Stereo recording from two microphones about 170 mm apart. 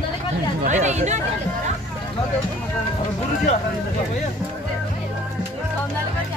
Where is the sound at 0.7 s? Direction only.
45° right (ahead or behind).